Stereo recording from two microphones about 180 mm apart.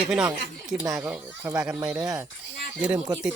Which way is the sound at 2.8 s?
5° right (ahead or behind).